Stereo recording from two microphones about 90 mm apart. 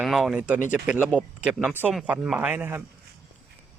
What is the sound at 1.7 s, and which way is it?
Speech, 20° right (ahead or behind).